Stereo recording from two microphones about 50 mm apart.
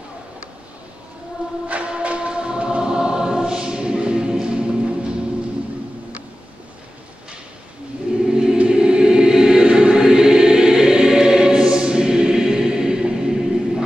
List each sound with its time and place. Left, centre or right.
1.7 s choir: right
8.3 s choir: centre